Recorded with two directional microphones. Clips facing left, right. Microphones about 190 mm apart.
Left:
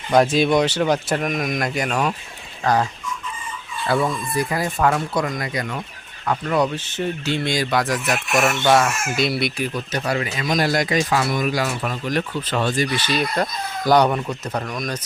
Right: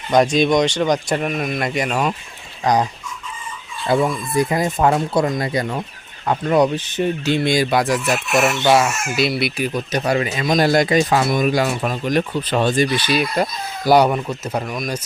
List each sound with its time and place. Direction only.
0.1 s speech: 5° left (ahead or behind)
1.5 s speech: centre (ahead or behind)
3.8 s speech: 15° right (ahead or behind)
9.7 s speech: 20° right (ahead or behind)
13.1 s speech: 10° right (ahead or behind)